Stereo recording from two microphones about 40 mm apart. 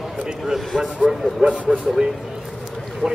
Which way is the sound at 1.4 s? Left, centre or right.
Right.